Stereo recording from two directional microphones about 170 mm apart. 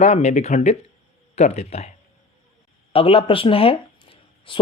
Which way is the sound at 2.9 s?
35° left (ahead or behind).